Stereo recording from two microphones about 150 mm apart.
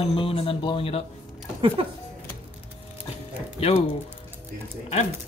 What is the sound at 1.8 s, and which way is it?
Speech, 40° right (ahead or behind).